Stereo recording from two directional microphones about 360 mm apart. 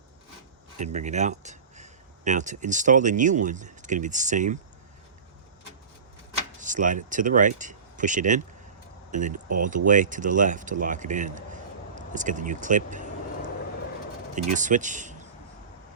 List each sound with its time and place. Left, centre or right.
0.8 s speech: centre
6.6 s speech: right
14.5 s speech: right